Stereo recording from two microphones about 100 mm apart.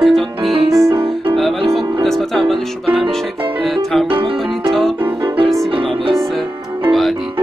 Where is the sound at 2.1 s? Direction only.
Centre (ahead or behind).